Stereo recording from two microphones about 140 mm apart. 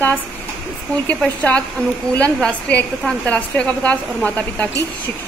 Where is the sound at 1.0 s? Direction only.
10° left (ahead or behind).